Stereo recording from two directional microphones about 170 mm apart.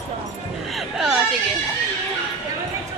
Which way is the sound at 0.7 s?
Centre (ahead or behind).